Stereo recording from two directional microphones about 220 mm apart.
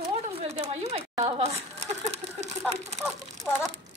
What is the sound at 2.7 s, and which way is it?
Speech, 30° right (ahead or behind).